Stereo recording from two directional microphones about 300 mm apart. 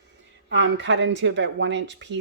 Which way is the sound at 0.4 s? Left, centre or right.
Right.